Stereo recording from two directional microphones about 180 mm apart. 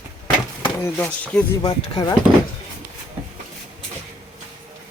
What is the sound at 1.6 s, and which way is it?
Speech, 20° left (ahead or behind).